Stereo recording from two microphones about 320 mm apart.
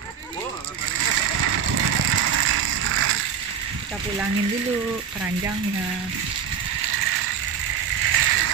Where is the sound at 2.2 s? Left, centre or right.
Right.